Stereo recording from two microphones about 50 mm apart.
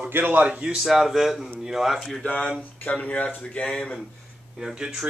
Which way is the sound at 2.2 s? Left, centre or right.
Left.